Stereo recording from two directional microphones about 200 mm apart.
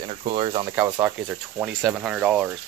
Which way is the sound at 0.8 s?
10° right (ahead or behind).